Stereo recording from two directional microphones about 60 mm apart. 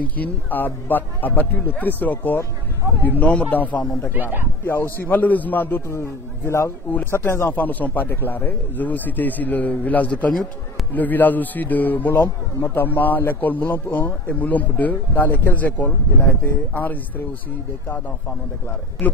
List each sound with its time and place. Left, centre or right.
0.0 s a man's voice: left
4.1 s speech: right
4.6 s speech: left
5.9 s a man's voice: left
7.4 s a man's voice: left
19.0 s a man's voice: left